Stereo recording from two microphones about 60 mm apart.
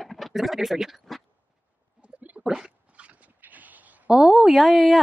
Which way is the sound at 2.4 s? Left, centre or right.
Centre.